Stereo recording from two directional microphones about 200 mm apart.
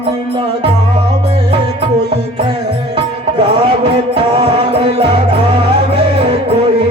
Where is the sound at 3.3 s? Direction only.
30° right (ahead or behind).